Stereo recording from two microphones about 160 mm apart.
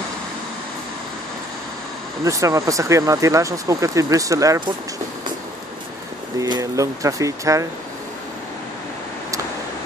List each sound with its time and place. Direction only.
2.2 s speech: 20° right (ahead or behind)
6.4 s speech: 20° right (ahead or behind)